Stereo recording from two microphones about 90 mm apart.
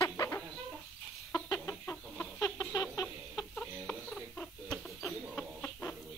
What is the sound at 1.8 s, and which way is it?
Chicken, 25° left (ahead or behind).